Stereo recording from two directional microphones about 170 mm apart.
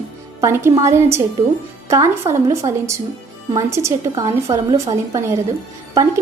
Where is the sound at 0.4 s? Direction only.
15° right (ahead or behind).